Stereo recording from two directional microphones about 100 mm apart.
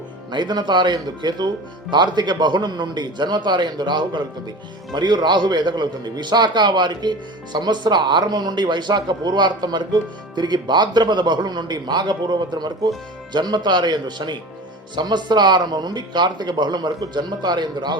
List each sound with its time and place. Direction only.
0.3 s a man's voice: 50° right (ahead or behind)